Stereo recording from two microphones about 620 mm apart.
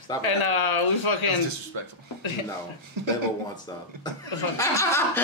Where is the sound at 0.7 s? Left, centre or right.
Left.